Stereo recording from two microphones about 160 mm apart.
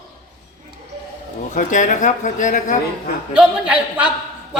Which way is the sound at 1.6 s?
55° left (ahead or behind).